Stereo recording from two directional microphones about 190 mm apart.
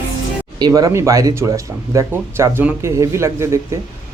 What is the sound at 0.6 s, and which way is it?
Speech, 20° right (ahead or behind).